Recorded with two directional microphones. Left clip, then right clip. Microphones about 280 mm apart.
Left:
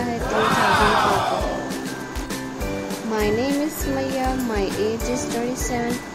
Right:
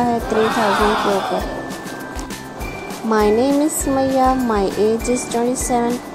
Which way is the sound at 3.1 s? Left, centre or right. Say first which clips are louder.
Right 7 dB; centre.